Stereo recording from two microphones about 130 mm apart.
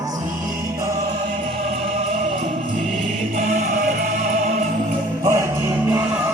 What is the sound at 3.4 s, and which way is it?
Music, 75° right (ahead or behind).